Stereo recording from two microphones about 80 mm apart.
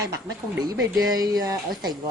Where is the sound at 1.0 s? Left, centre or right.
Right.